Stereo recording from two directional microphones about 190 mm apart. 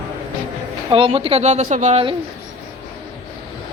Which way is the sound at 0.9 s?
30° right (ahead or behind).